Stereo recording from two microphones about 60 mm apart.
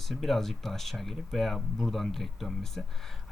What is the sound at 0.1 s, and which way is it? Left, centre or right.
Speech, centre.